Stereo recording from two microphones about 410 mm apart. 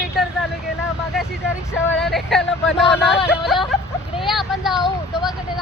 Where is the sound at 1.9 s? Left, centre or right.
Centre.